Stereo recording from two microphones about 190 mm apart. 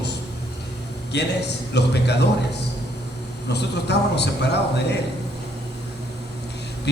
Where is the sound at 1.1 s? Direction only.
65° left (ahead or behind).